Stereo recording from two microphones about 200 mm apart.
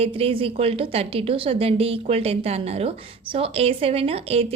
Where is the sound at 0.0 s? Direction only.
30° right (ahead or behind).